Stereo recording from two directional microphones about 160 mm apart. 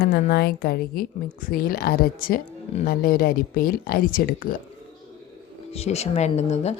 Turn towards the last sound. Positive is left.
turn(degrees=45)  # may be behind; listen again after turning